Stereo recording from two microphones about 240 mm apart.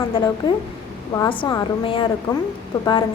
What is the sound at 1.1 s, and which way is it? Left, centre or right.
A woman's voice, centre.